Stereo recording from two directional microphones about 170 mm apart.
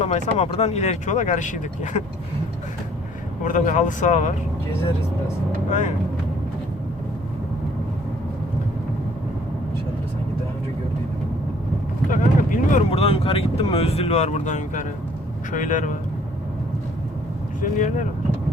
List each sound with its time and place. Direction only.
0.0 s speech: 40° left (ahead or behind)
3.4 s speech: 45° left (ahead or behind)
12.1 s speech: 50° left (ahead or behind)
12.9 s speech: 35° left (ahead or behind)
17.6 s speech: 50° left (ahead or behind)